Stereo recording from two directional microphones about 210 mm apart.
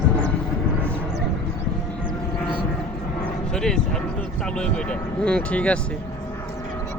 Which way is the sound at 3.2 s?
5° left (ahead or behind).